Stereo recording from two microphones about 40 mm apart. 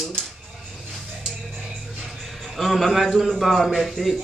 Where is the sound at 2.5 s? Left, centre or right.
Centre.